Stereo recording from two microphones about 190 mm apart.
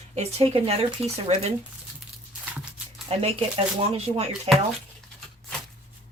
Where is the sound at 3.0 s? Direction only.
30° right (ahead or behind).